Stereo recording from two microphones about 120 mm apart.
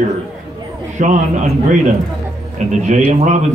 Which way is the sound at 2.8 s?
80° right.